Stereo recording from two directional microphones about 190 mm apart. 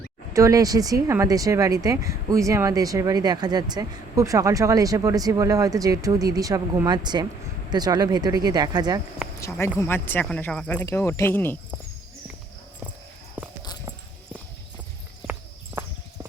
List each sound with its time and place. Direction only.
0.3 s speech: 15° right (ahead or behind)
9.4 s speech: 15° left (ahead or behind)